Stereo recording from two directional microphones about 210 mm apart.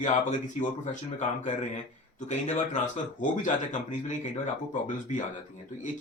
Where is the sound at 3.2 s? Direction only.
35° left (ahead or behind).